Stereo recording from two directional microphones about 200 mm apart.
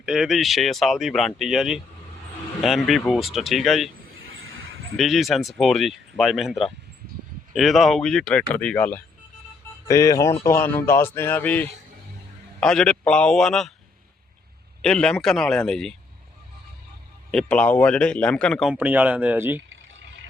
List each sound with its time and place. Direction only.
0.0 s speech: 5° right (ahead or behind)
4.4 s a sound: 90° right
4.9 s a man's voice: centre (ahead or behind)
14.8 s speech: 5° left (ahead or behind)
17.3 s speech: 5° left (ahead or behind)
18.7 s speech: 5° right (ahead or behind)